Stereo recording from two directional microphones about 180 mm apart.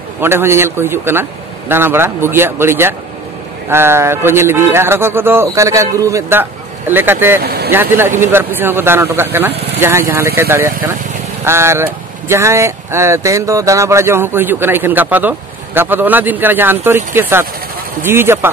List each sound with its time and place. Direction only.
0.2 s speech: 15° right (ahead or behind)
7.4 s vehicle: 60° right (ahead or behind)
7.7 s speech: 10° right (ahead or behind)